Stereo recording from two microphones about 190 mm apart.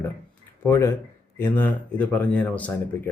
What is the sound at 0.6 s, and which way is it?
Speech, 15° left (ahead or behind).